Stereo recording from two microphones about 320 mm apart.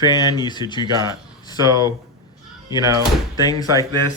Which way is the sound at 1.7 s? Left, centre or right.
Centre.